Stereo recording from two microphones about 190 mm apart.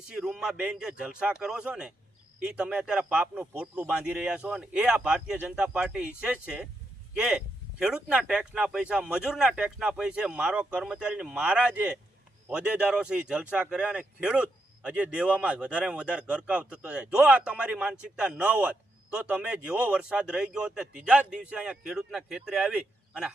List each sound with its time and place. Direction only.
0.1 s speech: 5° right (ahead or behind)